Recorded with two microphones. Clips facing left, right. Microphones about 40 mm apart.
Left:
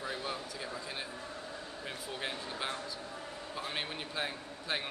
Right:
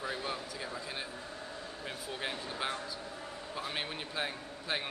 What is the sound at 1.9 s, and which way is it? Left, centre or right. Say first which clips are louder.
A man's voice: right 1 dB; centre.